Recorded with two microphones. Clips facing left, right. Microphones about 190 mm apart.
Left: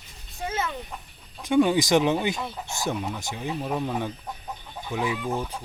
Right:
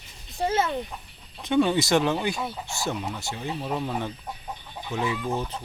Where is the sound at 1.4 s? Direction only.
10° left (ahead or behind).